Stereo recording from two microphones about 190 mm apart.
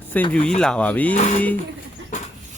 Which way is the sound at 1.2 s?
40° left (ahead or behind).